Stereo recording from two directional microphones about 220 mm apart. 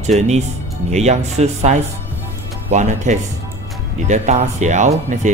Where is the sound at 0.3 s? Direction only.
30° right (ahead or behind).